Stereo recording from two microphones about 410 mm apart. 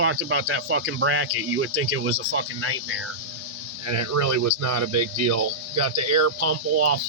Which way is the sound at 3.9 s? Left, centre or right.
Right.